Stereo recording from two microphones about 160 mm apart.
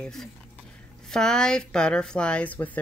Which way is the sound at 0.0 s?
5° left (ahead or behind).